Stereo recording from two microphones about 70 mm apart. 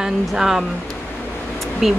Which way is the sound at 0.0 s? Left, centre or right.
Centre.